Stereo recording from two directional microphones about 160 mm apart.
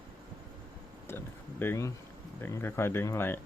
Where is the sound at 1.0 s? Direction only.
15° left (ahead or behind).